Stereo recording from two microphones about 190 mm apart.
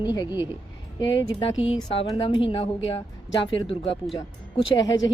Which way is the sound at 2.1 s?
25° left (ahead or behind).